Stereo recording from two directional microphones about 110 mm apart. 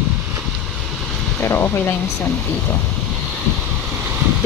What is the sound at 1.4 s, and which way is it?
Speech, 20° left (ahead or behind).